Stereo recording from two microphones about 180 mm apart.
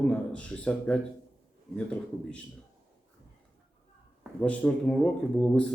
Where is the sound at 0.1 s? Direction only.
5° left (ahead or behind).